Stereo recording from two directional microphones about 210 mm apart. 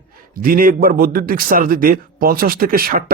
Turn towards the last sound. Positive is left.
turn(degrees=-45)  # may be behind; listen again after turning